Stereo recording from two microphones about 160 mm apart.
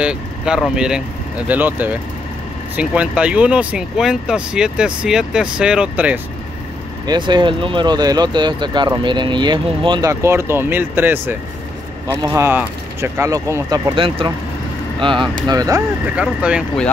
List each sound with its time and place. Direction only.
0.0 s speech: 5° right (ahead or behind)
7.1 s speech: 30° right (ahead or behind)
13.9 s speech: 35° right (ahead or behind)
16.2 s speech: 5° right (ahead or behind)